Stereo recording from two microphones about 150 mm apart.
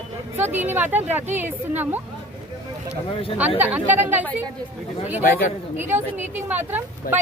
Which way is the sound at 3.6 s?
10° right (ahead or behind).